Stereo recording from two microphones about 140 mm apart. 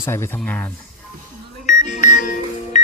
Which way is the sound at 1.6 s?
65° left (ahead or behind).